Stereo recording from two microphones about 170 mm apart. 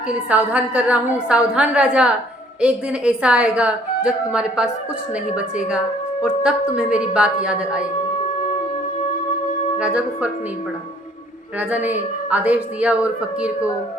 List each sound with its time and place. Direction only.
0.3 s a woman's voice: 10° right (ahead or behind)
9.7 s a woman's voice: 5° right (ahead or behind)
11.7 s a woman's voice: 10° right (ahead or behind)